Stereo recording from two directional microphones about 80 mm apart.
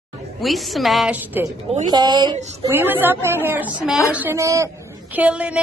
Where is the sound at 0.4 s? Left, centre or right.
Centre.